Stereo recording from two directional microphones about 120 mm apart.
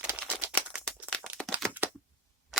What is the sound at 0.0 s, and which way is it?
Typewriter, 10° right (ahead or behind).